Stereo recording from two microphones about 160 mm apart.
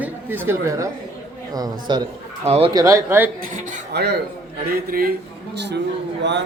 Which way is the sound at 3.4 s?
75° right (ahead or behind).